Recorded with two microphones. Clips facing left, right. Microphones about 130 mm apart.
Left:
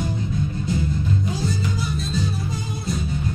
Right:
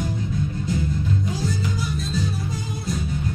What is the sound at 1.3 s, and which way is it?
Music, 25° left (ahead or behind).